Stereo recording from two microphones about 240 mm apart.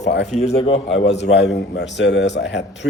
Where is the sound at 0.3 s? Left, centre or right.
Left.